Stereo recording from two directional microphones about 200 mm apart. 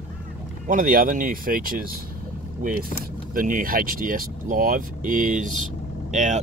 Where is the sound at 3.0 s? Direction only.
45° right (ahead or behind).